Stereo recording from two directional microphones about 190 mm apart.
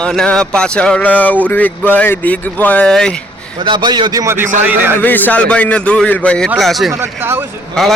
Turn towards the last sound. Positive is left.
turn(degrees=0)  # may be behind; listen again after turning